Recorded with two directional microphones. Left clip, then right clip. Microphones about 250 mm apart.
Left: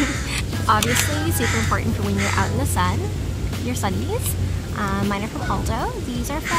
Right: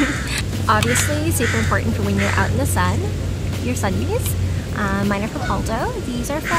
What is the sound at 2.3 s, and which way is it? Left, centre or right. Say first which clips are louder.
Speech: right 2 dB; centre.